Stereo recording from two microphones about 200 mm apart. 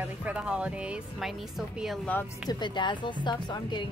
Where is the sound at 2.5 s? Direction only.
20° left (ahead or behind).